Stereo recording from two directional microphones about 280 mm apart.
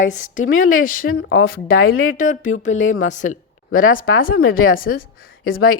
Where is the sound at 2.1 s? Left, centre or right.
Left.